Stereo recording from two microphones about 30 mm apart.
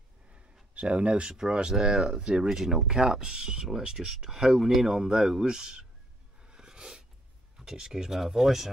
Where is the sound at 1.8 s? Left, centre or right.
Right.